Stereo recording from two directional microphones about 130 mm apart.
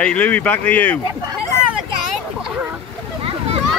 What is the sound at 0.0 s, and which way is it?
Speech, 10° left (ahead or behind).